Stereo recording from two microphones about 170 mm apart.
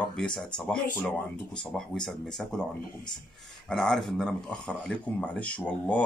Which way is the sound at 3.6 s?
5° left (ahead or behind).